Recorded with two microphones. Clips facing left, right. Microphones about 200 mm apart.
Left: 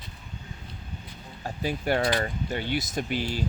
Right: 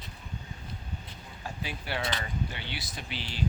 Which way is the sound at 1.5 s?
45° left (ahead or behind).